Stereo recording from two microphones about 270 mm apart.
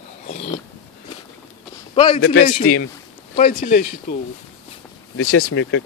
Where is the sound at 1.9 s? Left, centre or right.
Centre.